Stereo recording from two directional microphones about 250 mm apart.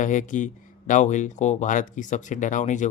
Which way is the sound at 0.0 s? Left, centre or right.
Left.